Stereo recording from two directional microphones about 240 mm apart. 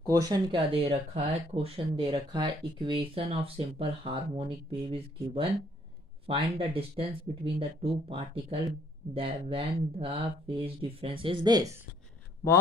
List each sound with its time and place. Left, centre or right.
0.0 s speech: centre